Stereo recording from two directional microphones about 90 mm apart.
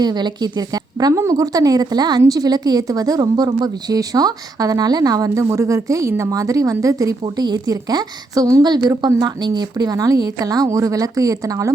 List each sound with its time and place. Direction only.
0.0 s a woman's voice: 55° right (ahead or behind)